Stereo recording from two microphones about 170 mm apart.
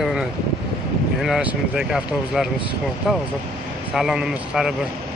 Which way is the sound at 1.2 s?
5° right (ahead or behind).